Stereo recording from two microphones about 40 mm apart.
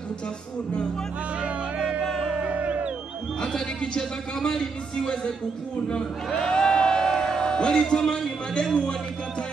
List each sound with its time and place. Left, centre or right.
1.8 s music: centre
2.4 s music: right
3.3 s a man's voice: left
5.9 s a sound: left
8.1 s a man's voice: left